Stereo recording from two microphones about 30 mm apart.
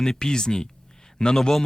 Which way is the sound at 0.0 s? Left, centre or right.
Left.